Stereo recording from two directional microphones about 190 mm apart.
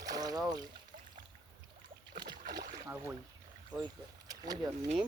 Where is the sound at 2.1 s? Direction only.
55° right (ahead or behind).